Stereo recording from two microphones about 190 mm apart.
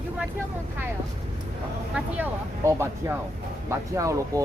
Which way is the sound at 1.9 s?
10° right (ahead or behind).